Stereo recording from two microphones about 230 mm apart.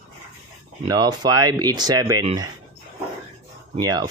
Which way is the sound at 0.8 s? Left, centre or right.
Centre.